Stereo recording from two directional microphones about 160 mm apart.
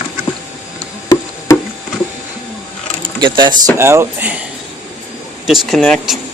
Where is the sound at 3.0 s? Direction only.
30° right (ahead or behind).